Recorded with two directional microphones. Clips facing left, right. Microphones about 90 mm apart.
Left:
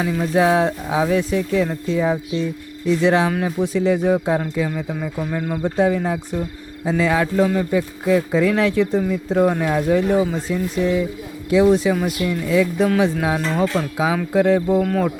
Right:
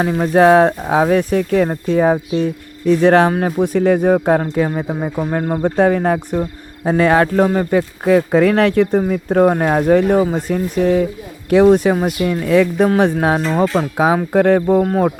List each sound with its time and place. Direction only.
0.0 s speech: 45° right (ahead or behind)
5.6 s a man's voice: 60° right (ahead or behind)
14.8 s speech: 35° right (ahead or behind)